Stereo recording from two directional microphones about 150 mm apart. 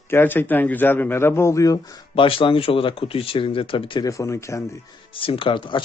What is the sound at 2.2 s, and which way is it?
Speech, 35° left (ahead or behind).